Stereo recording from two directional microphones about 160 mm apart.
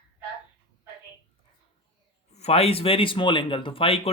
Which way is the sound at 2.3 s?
40° left (ahead or behind).